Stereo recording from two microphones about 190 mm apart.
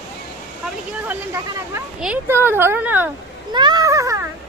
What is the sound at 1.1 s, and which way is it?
Speech, 10° right (ahead or behind).